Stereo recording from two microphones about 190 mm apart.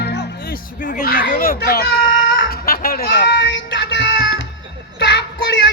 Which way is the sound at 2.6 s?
50° left (ahead or behind).